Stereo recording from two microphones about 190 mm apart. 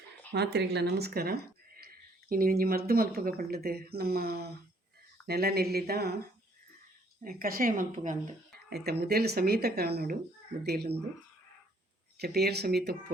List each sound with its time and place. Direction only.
0.3 s speech: 60° right (ahead or behind)
7.3 s speech: 50° right (ahead or behind)
8.5 s speech: 60° right (ahead or behind)
12.2 s speech: 60° right (ahead or behind)